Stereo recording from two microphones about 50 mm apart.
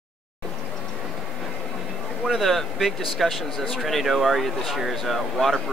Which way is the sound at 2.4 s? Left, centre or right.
Centre.